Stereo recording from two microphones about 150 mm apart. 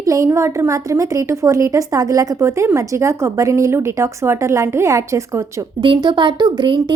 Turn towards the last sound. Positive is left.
turn(degrees=-30)  # may be behind; listen again after turning